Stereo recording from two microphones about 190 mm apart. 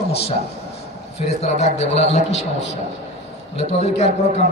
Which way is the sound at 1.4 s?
35° left (ahead or behind).